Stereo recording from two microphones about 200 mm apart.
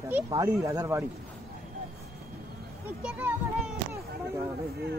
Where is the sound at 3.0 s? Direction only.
5° right (ahead or behind).